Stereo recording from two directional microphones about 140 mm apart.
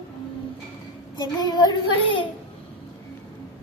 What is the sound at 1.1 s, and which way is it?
Speech, 30° left (ahead or behind).